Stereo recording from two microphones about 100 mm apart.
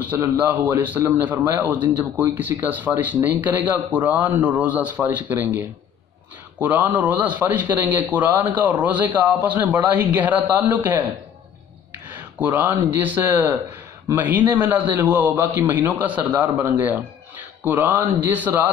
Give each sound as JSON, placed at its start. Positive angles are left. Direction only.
{"t": 0.0, "sound": "a man's voice", "side_deg": -20}
{"t": 12.6, "sound": "a man's voice", "side_deg": -15}